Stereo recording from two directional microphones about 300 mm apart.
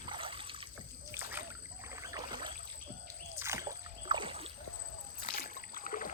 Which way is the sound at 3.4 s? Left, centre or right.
Centre.